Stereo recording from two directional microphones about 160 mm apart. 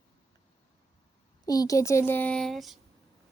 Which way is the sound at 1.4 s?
20° left (ahead or behind).